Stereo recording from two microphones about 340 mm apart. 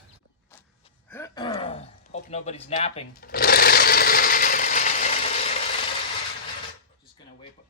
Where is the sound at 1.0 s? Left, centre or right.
Centre.